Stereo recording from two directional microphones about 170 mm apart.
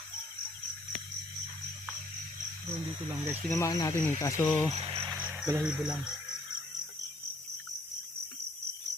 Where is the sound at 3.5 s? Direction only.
20° left (ahead or behind).